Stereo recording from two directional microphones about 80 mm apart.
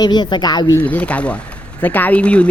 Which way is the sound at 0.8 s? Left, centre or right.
Centre.